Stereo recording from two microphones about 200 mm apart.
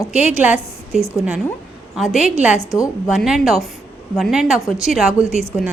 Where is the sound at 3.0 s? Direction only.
Centre (ahead or behind).